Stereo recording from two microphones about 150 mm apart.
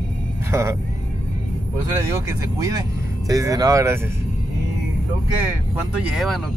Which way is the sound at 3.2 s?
20° right (ahead or behind).